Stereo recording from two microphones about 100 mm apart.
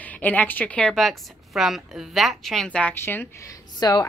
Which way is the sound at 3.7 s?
45° left (ahead or behind).